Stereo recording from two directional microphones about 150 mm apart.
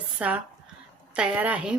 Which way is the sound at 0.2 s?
10° right (ahead or behind).